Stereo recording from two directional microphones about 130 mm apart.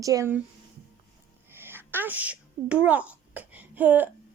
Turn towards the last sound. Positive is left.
turn(degrees=-15)  # may be behind; listen again after turning